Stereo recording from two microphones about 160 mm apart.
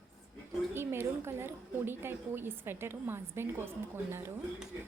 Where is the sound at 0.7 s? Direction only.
15° right (ahead or behind).